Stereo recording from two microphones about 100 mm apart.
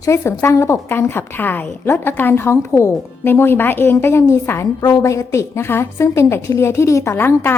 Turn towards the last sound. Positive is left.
turn(degrees=20)  # may be behind; listen again after turning